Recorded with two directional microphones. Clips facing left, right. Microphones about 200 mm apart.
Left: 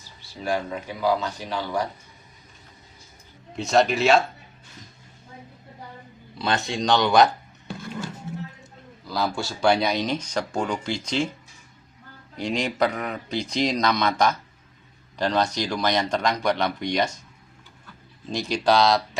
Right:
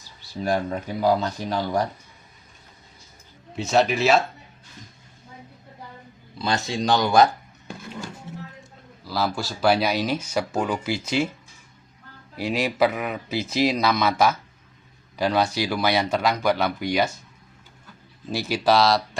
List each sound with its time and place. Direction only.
0.4 s speech: 40° right (ahead or behind)
3.5 s speech: centre (ahead or behind)
6.4 s speech: centre (ahead or behind)
9.0 s speech: 5° right (ahead or behind)
12.4 s speech: 5° right (ahead or behind)
18.3 s speech: 5° right (ahead or behind)